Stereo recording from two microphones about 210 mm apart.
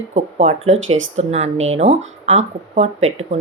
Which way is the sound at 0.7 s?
65° right (ahead or behind).